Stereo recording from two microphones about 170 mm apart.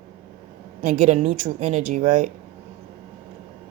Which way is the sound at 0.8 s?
50° right (ahead or behind).